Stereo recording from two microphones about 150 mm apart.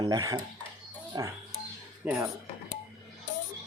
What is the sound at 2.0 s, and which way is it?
Speech, 5° right (ahead or behind).